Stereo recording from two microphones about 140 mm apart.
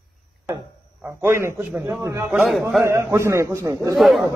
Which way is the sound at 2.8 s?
20° right (ahead or behind).